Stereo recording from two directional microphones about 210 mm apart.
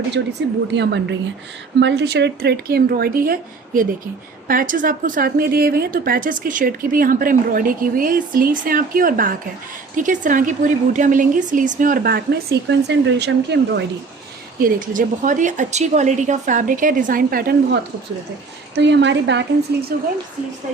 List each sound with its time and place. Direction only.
0.1 s speech: 55° right (ahead or behind)
4.4 s a woman's voice: 40° right (ahead or behind)
14.6 s a woman's voice: 40° right (ahead or behind)
18.7 s speech: 55° right (ahead or behind)
19.9 s speech: 45° right (ahead or behind)